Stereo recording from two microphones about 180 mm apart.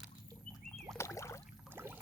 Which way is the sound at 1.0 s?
15° left (ahead or behind).